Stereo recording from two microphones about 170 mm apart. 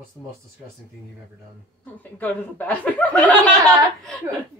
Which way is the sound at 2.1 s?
10° left (ahead or behind).